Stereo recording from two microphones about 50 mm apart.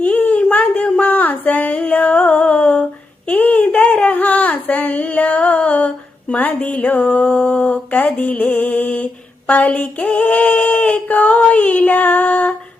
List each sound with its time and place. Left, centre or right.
0.0 s a sound: left
6.4 s speech: left
8.1 s music: left
9.5 s female singing: left